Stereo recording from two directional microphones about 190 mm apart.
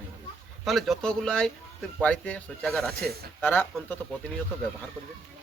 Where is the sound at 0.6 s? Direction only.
Centre (ahead or behind).